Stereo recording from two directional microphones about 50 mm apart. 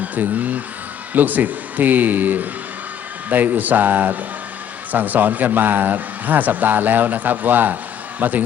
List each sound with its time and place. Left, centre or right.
0.0 s a man's voice: right